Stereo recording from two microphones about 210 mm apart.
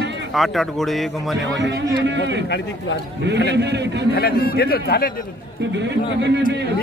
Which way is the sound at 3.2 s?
55° right (ahead or behind).